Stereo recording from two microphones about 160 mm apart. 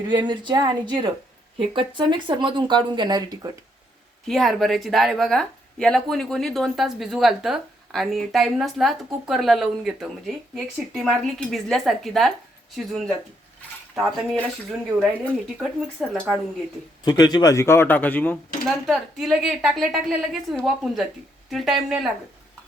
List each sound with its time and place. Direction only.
0.1 s speech: 25° right (ahead or behind)
4.3 s speech: centre (ahead or behind)
13.9 s speech: centre (ahead or behind)
17.0 s a man's voice: 25° left (ahead or behind)
18.7 s speech: centre (ahead or behind)